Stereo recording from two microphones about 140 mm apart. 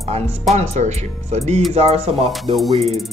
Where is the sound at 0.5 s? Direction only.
50° right (ahead or behind).